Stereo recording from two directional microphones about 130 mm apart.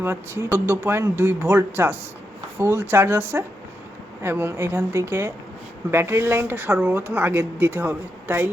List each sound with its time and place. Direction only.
0.0 s speech: 20° right (ahead or behind)